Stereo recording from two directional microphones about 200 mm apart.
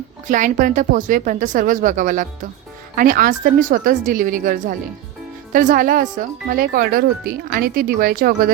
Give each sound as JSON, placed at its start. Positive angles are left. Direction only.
{"t": 0.3, "sound": "speech", "side_deg": -40}